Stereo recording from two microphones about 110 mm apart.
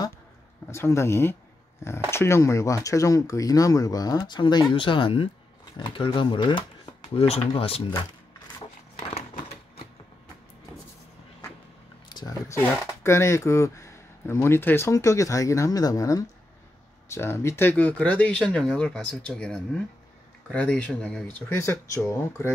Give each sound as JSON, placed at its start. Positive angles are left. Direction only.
{"t": 0.7, "sound": "speech", "side_deg": 25}
{"t": 7.2, "sound": "speech", "side_deg": 70}
{"t": 8.9, "sound": "a sound", "side_deg": 65}
{"t": 12.1, "sound": "a sound", "side_deg": 40}
{"t": 12.4, "sound": "speech", "side_deg": 20}
{"t": 21.5, "sound": "speech", "side_deg": 25}